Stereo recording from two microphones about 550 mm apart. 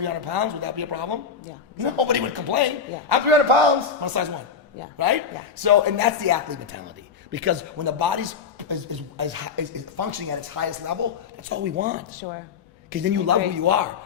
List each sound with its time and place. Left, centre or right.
0.0 s a man's voice: right
3.2 s a man's voice: right
4.0 s speech: right
7.3 s a man's voice: right
13.2 s speech: right